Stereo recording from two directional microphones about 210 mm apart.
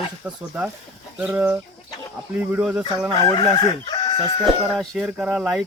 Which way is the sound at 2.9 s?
30° right (ahead or behind).